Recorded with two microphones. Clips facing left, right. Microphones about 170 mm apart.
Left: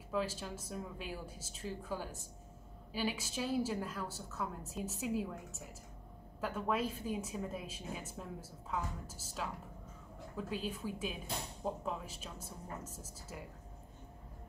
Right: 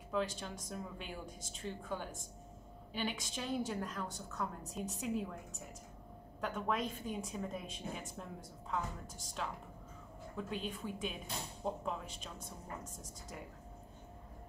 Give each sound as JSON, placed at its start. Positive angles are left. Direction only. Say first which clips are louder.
{"t": 0.1, "sound": "a woman's voice", "louder": "even", "side_deg": 5}